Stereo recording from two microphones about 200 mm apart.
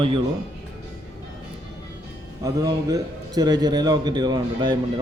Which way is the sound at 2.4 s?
20° right (ahead or behind).